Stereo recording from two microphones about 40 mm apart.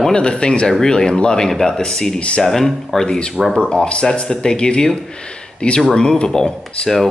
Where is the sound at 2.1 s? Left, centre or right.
Left.